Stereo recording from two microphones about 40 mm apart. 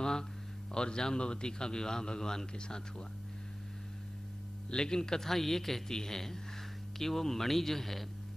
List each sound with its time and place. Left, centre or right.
0.0 s a sound: centre
0.7 s a man's voice: centre
4.6 s a man's voice: centre